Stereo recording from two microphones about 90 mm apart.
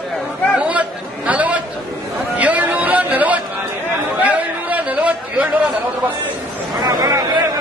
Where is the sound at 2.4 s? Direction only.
15° right (ahead or behind).